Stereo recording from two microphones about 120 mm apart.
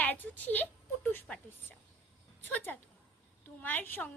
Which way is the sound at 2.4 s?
15° left (ahead or behind).